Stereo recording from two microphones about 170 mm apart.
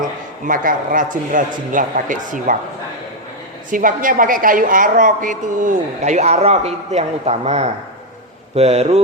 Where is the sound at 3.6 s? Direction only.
50° right (ahead or behind).